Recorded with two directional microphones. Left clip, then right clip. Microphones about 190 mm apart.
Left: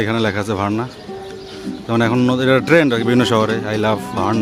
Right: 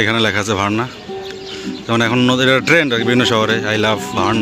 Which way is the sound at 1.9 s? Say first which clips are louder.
Right 2 dB; 5° left (ahead or behind).